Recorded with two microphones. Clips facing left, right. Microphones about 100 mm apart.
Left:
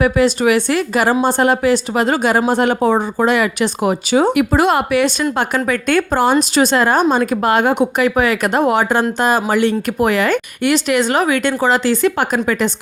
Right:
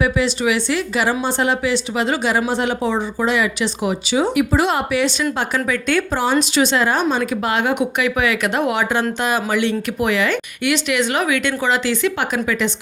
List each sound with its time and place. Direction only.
0.0 s speech: 50° left (ahead or behind)